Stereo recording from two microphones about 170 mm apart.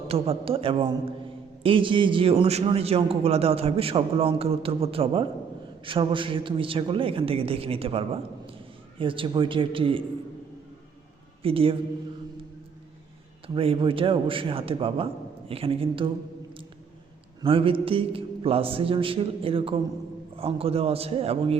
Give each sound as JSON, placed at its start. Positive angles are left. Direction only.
{"t": 0.1, "sound": "a man's voice", "side_deg": -35}
{"t": 11.4, "sound": "a man's voice", "side_deg": -35}
{"t": 13.5, "sound": "a man's voice", "side_deg": -30}
{"t": 17.4, "sound": "a man's voice", "side_deg": -30}